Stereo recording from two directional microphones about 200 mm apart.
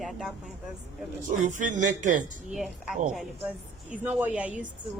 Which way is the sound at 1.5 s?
40° right (ahead or behind).